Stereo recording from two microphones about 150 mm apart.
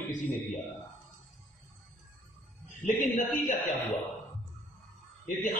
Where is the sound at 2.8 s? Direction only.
55° left (ahead or behind).